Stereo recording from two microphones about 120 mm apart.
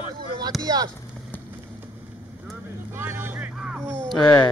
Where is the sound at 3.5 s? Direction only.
5° right (ahead or behind).